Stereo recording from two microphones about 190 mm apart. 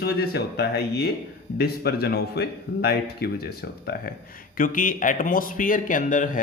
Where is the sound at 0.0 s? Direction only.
55° left (ahead or behind).